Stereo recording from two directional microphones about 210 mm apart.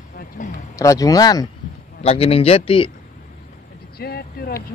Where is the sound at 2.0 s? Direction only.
30° left (ahead or behind).